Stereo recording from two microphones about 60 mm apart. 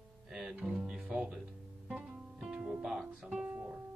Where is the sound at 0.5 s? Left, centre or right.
Centre.